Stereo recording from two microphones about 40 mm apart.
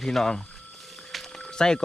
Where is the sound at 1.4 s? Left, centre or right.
Centre.